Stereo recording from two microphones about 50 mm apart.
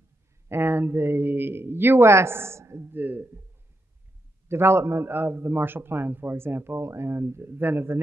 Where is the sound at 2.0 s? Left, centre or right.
Right.